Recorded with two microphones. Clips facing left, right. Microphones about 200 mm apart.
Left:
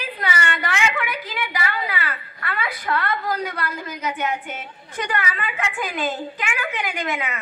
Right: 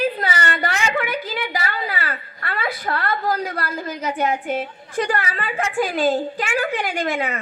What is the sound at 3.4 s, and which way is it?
A woman's voice, 35° right (ahead or behind).